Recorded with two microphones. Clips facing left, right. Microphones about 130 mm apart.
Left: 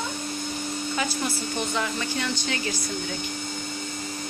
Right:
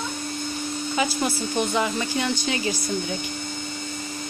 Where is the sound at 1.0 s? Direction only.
20° right (ahead or behind).